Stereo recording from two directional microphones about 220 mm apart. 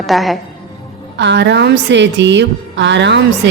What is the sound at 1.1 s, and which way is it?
A woman's voice, 50° right (ahead or behind).